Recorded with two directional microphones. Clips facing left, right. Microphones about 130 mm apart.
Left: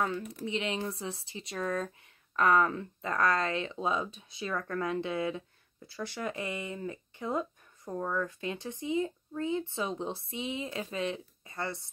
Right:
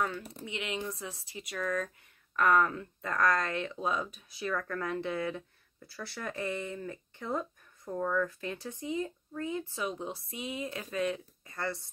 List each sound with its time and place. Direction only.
0.2 s speech: 30° right (ahead or behind)
0.5 s speech: 30° left (ahead or behind)